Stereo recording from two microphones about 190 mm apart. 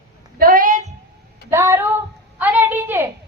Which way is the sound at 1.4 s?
15° right (ahead or behind).